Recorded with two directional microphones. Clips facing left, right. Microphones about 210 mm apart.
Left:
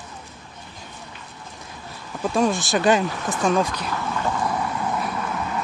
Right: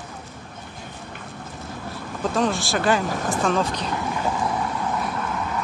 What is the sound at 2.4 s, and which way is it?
Speech, 15° left (ahead or behind).